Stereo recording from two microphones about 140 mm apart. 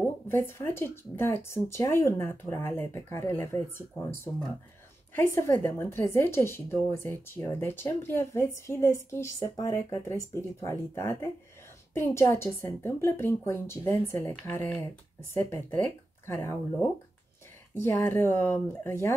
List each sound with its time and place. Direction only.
0.0 s a woman's voice: 15° left (ahead or behind)
17.7 s a woman's voice: 15° left (ahead or behind)